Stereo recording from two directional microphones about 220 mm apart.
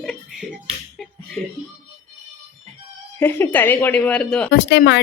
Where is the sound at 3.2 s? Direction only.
10° left (ahead or behind).